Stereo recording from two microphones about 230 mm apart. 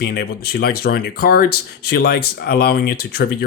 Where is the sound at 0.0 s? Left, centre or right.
Left.